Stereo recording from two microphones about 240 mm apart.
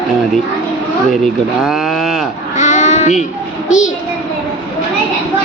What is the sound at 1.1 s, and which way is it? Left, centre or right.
Speech, centre.